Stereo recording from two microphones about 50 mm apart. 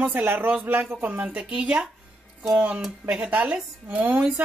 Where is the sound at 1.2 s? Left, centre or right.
Centre; by 4.2 s right.